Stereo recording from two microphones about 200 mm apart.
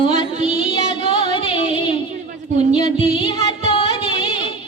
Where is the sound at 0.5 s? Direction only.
25° left (ahead or behind).